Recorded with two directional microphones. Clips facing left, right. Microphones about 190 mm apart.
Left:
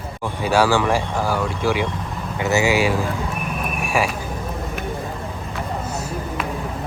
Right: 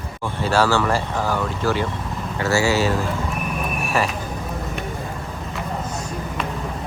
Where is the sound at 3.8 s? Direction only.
10° left (ahead or behind).